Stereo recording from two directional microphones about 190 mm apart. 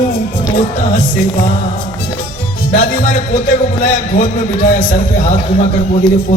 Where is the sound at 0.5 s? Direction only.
45° left (ahead or behind).